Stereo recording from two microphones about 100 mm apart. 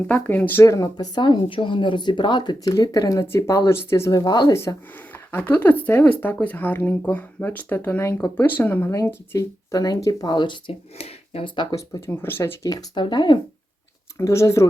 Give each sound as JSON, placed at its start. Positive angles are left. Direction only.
{"t": 0.1, "sound": "speech", "side_deg": 15}
{"t": 0.6, "sound": "speech", "side_deg": 30}
{"t": 0.9, "sound": "speech", "side_deg": 50}
{"t": 4.1, "sound": "speech", "side_deg": 45}
{"t": 5.1, "sound": "speech", "side_deg": 20}
{"t": 10.9, "sound": "speech", "side_deg": 85}
{"t": 11.4, "sound": "speech", "side_deg": 50}
{"t": 11.7, "sound": "speech", "side_deg": 25}
{"t": 12.6, "sound": "speech", "side_deg": 40}
{"t": 14.2, "sound": "speech", "side_deg": 30}